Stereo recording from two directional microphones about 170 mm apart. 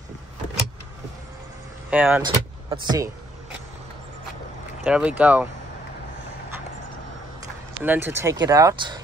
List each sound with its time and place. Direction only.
1.9 s speech: 10° right (ahead or behind)
2.2 s speech: 25° right (ahead or behind)
4.8 s speech: 5° right (ahead or behind)
7.8 s speech: 10° right (ahead or behind)